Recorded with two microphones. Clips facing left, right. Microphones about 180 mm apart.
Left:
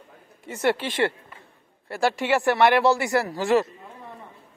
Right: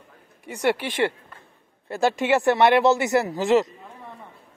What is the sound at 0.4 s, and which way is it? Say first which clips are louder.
Speech: even; 15° right (ahead or behind).